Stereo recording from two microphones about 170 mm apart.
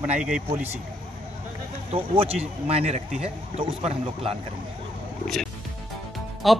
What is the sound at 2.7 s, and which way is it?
Speech, 35° right (ahead or behind).